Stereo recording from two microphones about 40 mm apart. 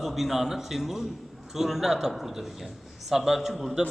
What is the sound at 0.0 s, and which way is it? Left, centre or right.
A man's voice, centre.